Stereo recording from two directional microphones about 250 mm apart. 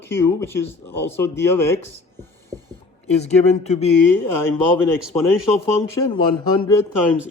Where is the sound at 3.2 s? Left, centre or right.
Left.